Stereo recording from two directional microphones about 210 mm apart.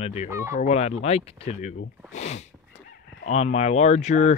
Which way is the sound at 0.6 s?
30° left (ahead or behind).